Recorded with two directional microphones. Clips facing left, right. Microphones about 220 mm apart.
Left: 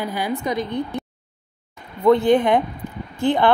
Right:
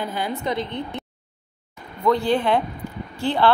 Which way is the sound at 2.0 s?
20° left (ahead or behind).